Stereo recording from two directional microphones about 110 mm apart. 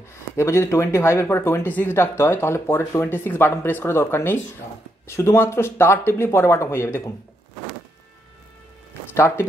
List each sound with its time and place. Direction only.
0.1 s speech: 25° left (ahead or behind)
9.1 s speech: 25° left (ahead or behind)